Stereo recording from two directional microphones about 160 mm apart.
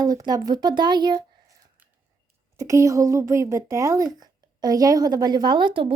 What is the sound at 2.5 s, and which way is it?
A woman's voice, 20° right (ahead or behind).